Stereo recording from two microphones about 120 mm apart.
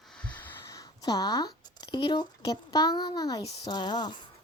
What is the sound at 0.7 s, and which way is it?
A woman's voice, 30° left (ahead or behind).